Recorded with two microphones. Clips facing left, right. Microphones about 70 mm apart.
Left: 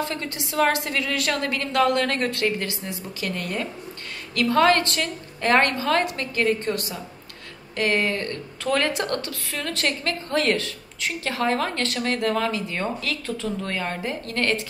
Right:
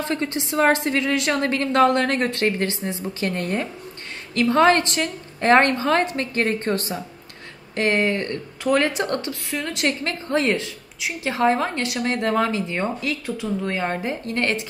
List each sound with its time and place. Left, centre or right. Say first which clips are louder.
0.0 s a woman's voice: right 4 dB; right